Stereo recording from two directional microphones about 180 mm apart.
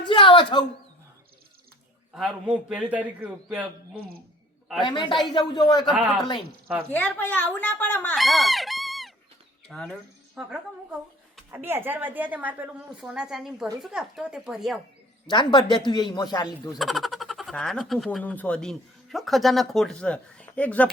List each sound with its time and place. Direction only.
0.0 s a sound: 25° left (ahead or behind)
2.1 s a man's voice: centre (ahead or behind)
4.8 s speech: 25° left (ahead or behind)
5.8 s a man's voice: 5° right (ahead or behind)
6.9 s speech: 10° left (ahead or behind)
11.5 s a woman's voice: 10° right (ahead or behind)
15.3 s speech: 25° left (ahead or behind)
16.7 s speech: centre (ahead or behind)